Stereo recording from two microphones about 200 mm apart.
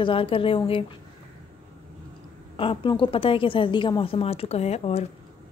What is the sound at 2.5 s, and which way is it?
A woman's voice, 25° left (ahead or behind).